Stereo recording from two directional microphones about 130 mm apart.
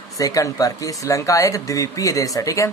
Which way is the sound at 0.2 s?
25° left (ahead or behind).